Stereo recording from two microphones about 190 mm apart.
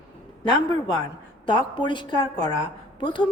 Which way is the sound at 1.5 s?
25° left (ahead or behind).